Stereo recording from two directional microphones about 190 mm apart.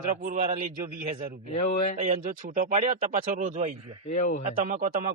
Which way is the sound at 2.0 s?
45° right (ahead or behind).